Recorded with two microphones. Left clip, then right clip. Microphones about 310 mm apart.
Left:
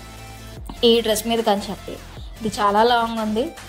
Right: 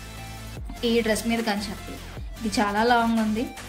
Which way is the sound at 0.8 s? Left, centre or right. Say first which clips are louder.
Left 7 dB; centre.